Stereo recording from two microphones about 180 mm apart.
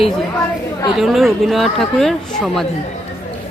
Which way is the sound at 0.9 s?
Centre (ahead or behind).